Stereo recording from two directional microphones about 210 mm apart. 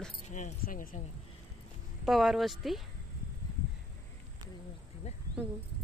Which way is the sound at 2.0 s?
Centre (ahead or behind).